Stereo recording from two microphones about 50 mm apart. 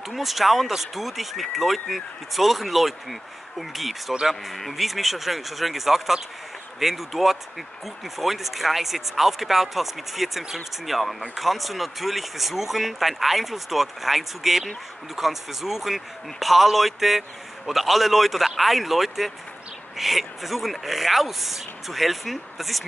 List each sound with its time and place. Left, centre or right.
0.1 s speech: centre